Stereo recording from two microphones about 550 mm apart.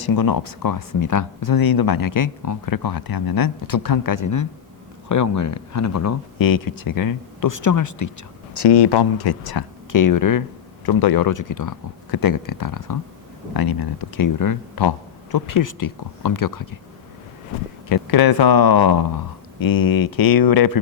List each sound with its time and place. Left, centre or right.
0.0 s speech: left
8.5 s speech: left
17.8 s speech: left